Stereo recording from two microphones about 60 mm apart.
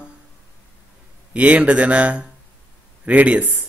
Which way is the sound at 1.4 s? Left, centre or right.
Right.